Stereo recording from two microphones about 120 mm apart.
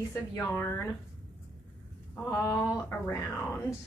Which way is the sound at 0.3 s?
25° left (ahead or behind).